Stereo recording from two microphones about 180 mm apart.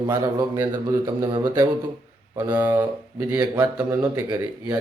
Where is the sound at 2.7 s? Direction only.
10° right (ahead or behind).